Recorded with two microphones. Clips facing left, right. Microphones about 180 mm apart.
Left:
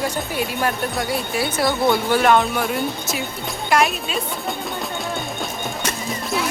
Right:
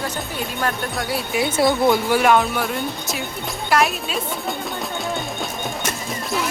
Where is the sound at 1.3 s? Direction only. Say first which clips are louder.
Right 2 dB; 20° right (ahead or behind).